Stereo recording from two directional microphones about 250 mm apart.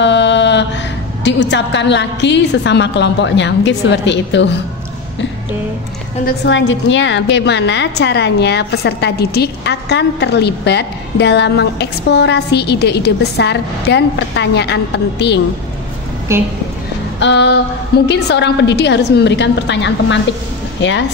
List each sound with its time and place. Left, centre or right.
0.0 s mantra: left
1.2 s a woman's voice: left
6.2 s a woman's voice: left
16.3 s a woman's voice: centre
17.2 s a woman's voice: left